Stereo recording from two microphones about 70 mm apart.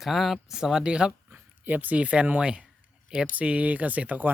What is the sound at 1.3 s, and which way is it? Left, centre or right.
Speech, right.